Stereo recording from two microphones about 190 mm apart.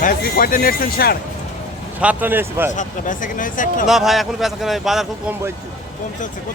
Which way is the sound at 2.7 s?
40° left (ahead or behind).